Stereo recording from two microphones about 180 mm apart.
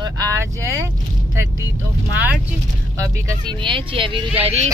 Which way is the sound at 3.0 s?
20° right (ahead or behind).